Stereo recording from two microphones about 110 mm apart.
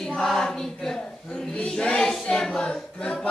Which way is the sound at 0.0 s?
5° left (ahead or behind).